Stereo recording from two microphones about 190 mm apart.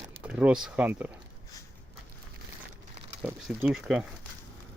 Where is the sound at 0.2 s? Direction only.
5° right (ahead or behind).